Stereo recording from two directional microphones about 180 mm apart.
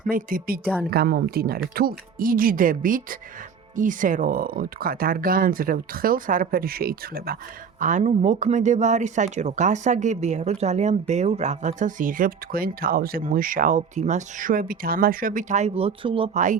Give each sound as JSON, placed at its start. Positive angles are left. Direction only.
{"t": 0.1, "sound": "speech", "side_deg": -50}
{"t": 7.8, "sound": "speech", "side_deg": -45}